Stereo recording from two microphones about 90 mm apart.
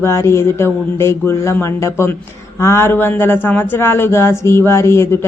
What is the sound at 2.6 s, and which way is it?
Speech, 30° left (ahead or behind).